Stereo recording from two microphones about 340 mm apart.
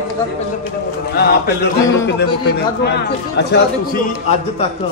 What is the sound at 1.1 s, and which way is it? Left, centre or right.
Speech, left.